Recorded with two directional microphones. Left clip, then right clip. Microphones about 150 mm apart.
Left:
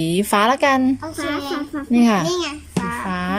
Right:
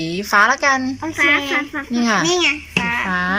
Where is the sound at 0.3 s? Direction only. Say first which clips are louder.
Right 3 dB; 20° left (ahead or behind).